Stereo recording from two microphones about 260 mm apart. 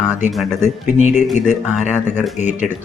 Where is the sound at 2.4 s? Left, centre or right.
Left.